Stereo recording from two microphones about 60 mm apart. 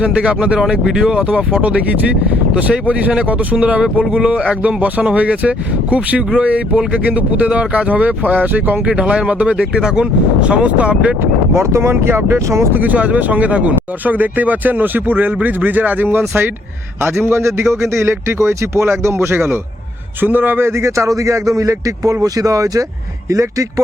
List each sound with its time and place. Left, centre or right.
0.0 s speech: centre
2.6 s speech: right
8.9 s speech: centre
11.5 s a man's voice: right
12.7 s a man's voice: right
20.2 s speech: right